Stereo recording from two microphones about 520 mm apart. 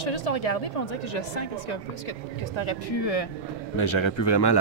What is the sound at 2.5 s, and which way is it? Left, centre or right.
Speech, left.